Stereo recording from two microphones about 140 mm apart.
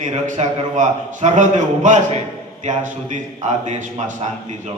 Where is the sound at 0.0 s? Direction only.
55° right (ahead or behind).